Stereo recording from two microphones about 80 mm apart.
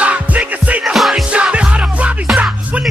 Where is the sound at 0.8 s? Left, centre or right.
Centre.